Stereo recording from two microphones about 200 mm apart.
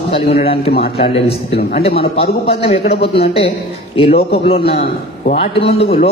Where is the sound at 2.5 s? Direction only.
30° left (ahead or behind).